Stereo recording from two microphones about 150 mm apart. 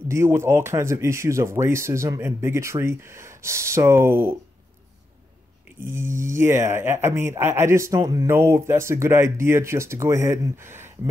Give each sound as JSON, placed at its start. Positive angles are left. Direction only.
{"t": 0.1, "sound": "speech", "side_deg": -15}
{"t": 6.3, "sound": "speech", "side_deg": -15}